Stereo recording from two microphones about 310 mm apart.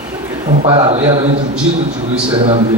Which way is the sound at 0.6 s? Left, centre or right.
Centre.